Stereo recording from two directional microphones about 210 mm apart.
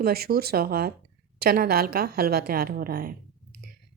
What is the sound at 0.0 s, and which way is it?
A woman's voice, 45° right (ahead or behind).